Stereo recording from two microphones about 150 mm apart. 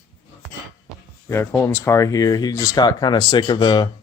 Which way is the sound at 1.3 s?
15° left (ahead or behind).